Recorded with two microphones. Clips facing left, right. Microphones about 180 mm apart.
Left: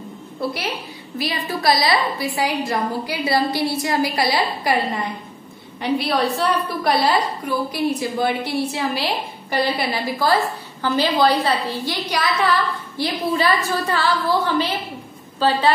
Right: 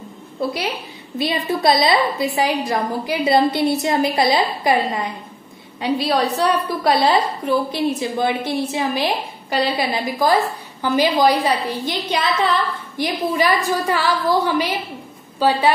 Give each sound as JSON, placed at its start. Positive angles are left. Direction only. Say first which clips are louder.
{"t": 1.1, "sound": "a woman's voice", "louder": "right 4 dB", "side_deg": -25}
{"t": 5.9, "sound": "a woman's voice", "louder": "right 1 dB", "side_deg": -20}